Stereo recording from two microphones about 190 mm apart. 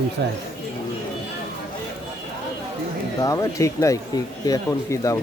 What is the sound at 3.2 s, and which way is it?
A man's voice, 15° left (ahead or behind).